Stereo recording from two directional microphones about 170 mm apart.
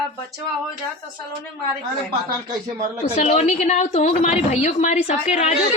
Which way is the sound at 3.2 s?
45° left (ahead or behind).